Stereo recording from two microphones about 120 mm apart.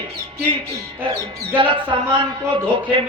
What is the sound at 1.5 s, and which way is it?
Speech, 45° right (ahead or behind).